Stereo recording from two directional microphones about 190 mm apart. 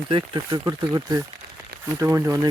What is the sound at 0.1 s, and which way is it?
Speech, 30° right (ahead or behind).